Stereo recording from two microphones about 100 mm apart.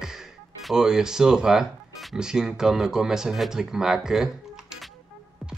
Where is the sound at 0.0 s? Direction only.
5° right (ahead or behind).